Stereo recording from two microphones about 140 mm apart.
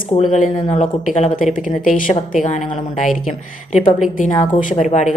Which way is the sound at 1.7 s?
75° left (ahead or behind).